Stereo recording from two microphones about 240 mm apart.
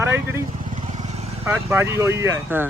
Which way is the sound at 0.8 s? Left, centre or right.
Right.